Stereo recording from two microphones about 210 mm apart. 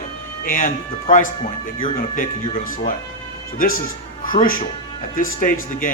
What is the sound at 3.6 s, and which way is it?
Speech, 40° left (ahead or behind).